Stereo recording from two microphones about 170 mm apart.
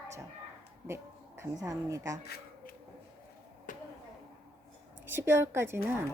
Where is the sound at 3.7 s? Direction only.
50° left (ahead or behind).